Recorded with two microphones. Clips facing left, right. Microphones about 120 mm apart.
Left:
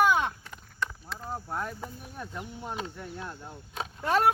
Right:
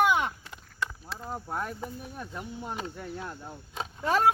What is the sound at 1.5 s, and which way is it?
Speech, 10° right (ahead or behind).